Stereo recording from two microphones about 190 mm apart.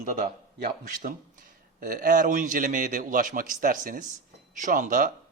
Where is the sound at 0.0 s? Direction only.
45° right (ahead or behind).